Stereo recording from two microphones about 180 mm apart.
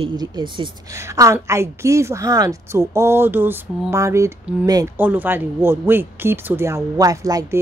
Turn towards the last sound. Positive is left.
turn(degrees=-20)  # may be behind; listen again after turning